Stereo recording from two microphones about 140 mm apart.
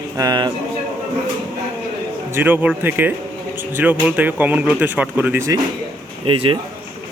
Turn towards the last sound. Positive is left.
turn(degrees=-40)  # may be behind; listen again after turning